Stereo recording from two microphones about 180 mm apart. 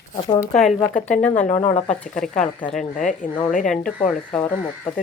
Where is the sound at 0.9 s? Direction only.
45° left (ahead or behind).